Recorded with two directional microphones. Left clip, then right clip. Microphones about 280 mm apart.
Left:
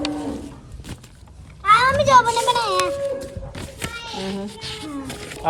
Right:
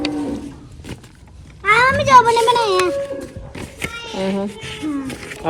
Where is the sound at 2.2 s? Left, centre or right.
Centre.